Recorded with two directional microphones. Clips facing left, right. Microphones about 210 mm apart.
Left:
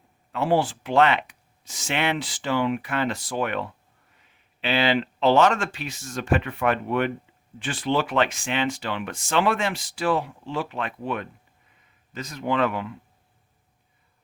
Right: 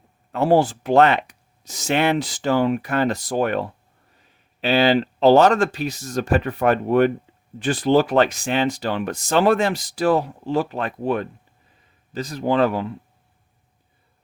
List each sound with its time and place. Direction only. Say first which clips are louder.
0.3 s speech: right 5 dB; 40° right (ahead or behind)